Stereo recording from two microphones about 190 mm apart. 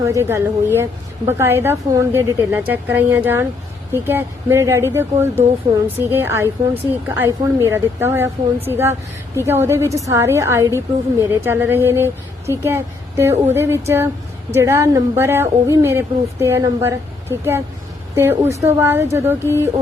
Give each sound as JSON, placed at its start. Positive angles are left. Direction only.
{"t": 0.0, "sound": "a woman's voice", "side_deg": -15}
{"t": 18.6, "sound": "a woman's voice", "side_deg": -10}